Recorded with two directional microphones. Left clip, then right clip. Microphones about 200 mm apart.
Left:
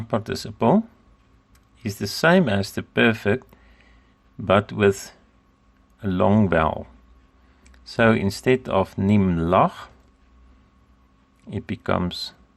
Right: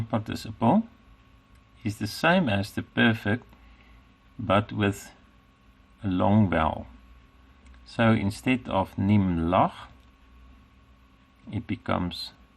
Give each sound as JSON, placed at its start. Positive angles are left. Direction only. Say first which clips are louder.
{"t": 0.1, "sound": "speech", "louder": "left 6 dB", "side_deg": 35}
{"t": 1.8, "sound": "speech", "louder": "left 5 dB", "side_deg": 30}
{"t": 4.4, "sound": "speech", "louder": "left 7 dB", "side_deg": 35}
{"t": 7.9, "sound": "speech", "louder": "left 6 dB", "side_deg": 35}
{"t": 11.5, "sound": "speech", "louder": "left 5 dB", "side_deg": 35}